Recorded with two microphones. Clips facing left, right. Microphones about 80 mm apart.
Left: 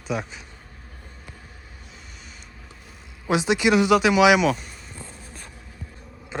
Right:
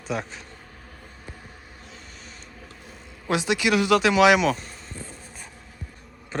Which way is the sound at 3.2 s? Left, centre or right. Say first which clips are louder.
Left 3 dB; left.